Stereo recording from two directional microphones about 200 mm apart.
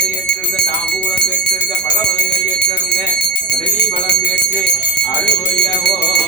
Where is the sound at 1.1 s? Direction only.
60° left (ahead or behind).